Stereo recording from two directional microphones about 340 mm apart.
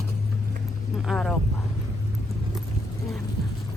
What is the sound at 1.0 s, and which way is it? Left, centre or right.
Speech, centre.